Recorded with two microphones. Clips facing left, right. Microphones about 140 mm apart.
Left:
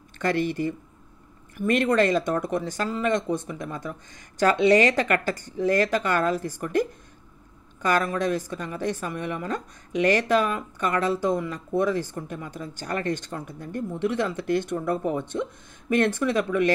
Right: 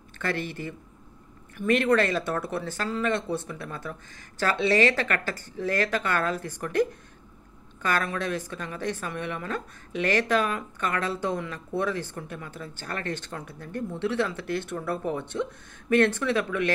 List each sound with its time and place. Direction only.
0.4 s speech: 45° left (ahead or behind)
1.8 s a woman's voice: 15° left (ahead or behind)